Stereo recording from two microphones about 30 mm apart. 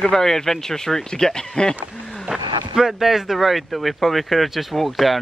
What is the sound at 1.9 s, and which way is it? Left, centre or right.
Wild animals, centre.